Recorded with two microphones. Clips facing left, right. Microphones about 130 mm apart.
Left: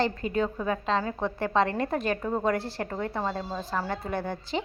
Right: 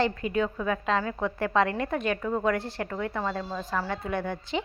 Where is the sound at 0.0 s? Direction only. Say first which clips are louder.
Even; 35° left (ahead or behind).